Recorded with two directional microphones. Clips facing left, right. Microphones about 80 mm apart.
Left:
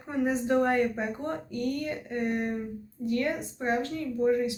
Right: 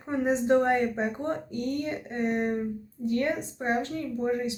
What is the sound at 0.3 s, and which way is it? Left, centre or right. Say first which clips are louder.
Speech: right 3 dB; right.